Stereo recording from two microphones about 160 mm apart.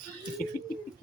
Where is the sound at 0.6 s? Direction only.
60° left (ahead or behind).